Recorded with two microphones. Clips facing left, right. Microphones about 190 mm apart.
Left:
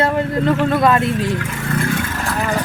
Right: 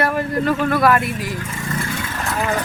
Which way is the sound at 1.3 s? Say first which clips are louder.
Left 5 dB; 70° left (ahead or behind).